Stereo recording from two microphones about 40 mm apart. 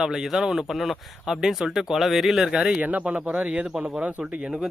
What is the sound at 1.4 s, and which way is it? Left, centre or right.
Speech, centre.